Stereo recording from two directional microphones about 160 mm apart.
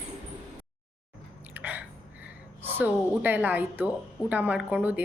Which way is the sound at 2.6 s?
10° right (ahead or behind).